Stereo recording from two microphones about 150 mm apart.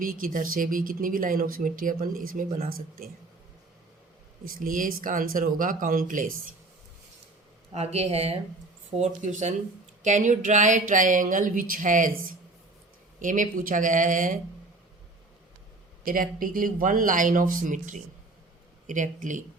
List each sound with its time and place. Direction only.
0.0 s speech: 65° right (ahead or behind)
4.4 s speech: 65° right (ahead or behind)
7.7 s speech: 45° right (ahead or behind)
16.0 s speech: 70° right (ahead or behind)